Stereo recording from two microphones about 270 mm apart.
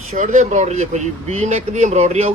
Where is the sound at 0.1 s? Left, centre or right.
Right.